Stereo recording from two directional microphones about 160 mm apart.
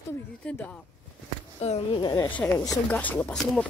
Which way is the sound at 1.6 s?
40° left (ahead or behind).